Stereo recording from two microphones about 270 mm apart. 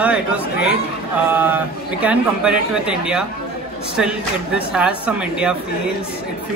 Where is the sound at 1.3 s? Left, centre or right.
Centre.